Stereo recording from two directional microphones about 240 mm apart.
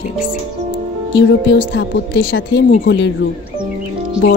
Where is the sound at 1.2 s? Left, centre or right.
Left.